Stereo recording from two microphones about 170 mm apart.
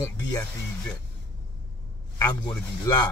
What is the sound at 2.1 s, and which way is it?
Speech, 20° left (ahead or behind).